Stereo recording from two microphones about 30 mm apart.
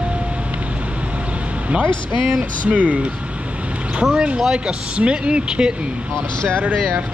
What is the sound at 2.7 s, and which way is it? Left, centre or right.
Speech, right.